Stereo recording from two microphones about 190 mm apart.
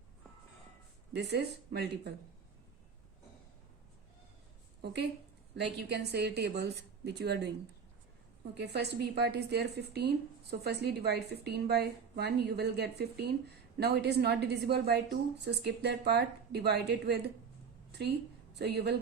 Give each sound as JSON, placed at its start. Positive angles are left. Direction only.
{"t": 1.1, "sound": "a woman's voice", "side_deg": -60}
{"t": 5.5, "sound": "a woman's voice", "side_deg": -60}
{"t": 8.5, "sound": "a woman's voice", "side_deg": -60}
{"t": 18.5, "sound": "a woman's voice", "side_deg": -60}